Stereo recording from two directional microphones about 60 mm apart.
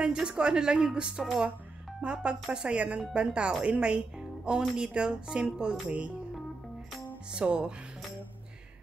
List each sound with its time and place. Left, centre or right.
0.0 s speech: centre
7.3 s speech: centre